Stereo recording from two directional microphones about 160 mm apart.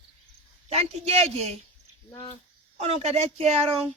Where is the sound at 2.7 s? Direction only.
40° right (ahead or behind).